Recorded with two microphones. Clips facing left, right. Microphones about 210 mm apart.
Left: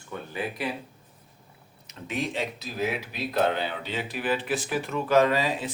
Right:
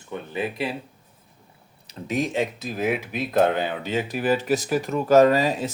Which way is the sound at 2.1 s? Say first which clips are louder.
Right 6 dB; 45° right (ahead or behind).